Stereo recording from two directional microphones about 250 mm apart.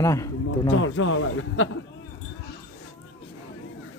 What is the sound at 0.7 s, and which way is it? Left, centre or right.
Speech, left.